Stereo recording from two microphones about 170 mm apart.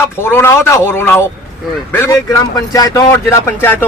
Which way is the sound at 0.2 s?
15° left (ahead or behind).